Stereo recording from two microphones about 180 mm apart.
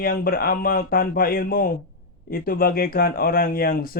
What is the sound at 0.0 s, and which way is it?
Speech, 55° left (ahead or behind).